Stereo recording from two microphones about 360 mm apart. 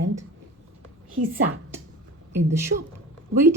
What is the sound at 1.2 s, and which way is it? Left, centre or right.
Speech, right.